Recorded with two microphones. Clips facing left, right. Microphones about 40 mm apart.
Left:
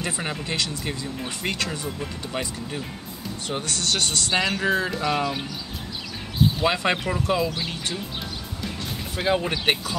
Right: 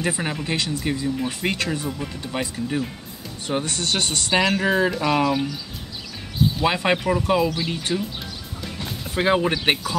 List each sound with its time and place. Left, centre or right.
0.2 s speech: centre
1.9 s speech: centre
3.5 s speech: right
6.6 s speech: centre
9.1 s speech: right
9.4 s speech: centre